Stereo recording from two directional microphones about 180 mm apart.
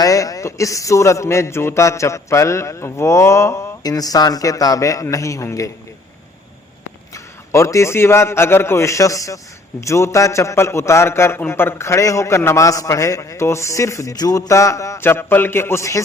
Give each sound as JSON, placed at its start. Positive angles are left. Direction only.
{"t": 0.0, "sound": "a man's voice", "side_deg": 20}
{"t": 7.1, "sound": "a man's voice", "side_deg": 15}